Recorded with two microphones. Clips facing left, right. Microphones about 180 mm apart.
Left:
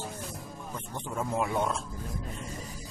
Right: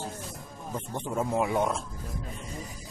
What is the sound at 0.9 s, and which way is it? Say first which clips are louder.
Speech: right 3 dB; 20° right (ahead or behind).